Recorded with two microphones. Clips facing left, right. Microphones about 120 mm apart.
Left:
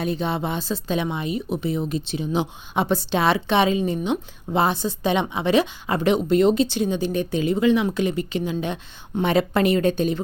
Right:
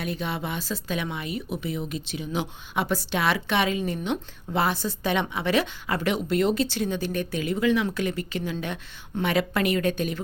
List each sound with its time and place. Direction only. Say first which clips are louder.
0.0 s speech: left 6 dB; 25° left (ahead or behind)